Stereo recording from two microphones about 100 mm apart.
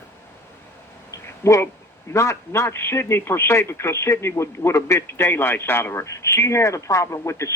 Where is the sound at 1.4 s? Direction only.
25° left (ahead or behind).